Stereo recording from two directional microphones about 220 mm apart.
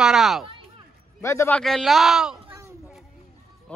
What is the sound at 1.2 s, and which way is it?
Speech, 10° left (ahead or behind).